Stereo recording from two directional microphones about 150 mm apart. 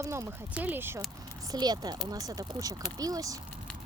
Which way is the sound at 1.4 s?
25° right (ahead or behind).